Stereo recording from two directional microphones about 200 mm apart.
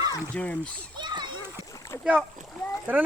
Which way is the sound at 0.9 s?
20° right (ahead or behind).